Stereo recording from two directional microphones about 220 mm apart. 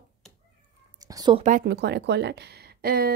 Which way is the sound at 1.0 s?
20° right (ahead or behind).